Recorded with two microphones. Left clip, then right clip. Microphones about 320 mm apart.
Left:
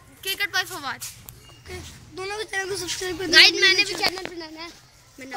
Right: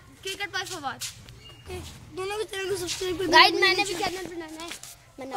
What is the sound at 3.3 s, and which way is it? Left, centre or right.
Speech, centre.